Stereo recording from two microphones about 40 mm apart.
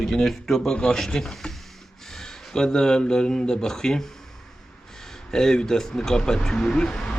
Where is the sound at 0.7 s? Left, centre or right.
Centre.